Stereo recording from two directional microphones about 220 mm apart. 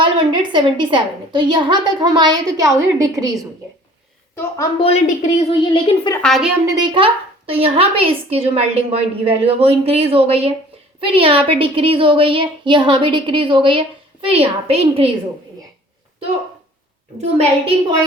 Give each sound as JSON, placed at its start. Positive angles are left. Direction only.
{"t": 0.0, "sound": "a woman's voice", "side_deg": -20}
{"t": 4.4, "sound": "a woman's voice", "side_deg": 15}
{"t": 4.9, "sound": "a woman's voice", "side_deg": 30}
{"t": 6.2, "sound": "a woman's voice", "side_deg": 0}
{"t": 6.7, "sound": "a woman's voice", "side_deg": -20}
{"t": 17.2, "sound": "a woman's voice", "side_deg": -25}